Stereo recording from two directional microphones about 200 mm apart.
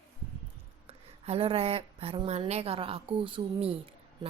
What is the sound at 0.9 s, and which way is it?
Speech, 30° right (ahead or behind).